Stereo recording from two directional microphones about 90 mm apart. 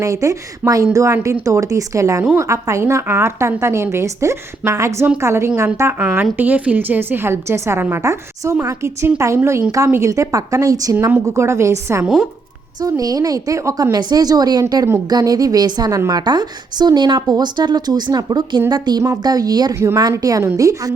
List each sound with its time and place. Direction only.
0.0 s a woman's voice: 35° right (ahead or behind)
13.9 s a woman's voice: 50° right (ahead or behind)
19.7 s a woman's voice: 30° right (ahead or behind)
20.0 s a woman's voice: 40° right (ahead or behind)